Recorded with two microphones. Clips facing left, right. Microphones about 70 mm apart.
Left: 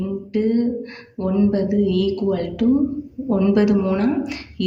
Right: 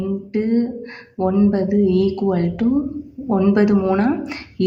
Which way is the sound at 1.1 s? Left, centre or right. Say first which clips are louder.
Right 2 dB; right.